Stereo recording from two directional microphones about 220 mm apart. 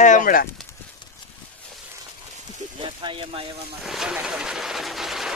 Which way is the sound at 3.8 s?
Centre (ahead or behind).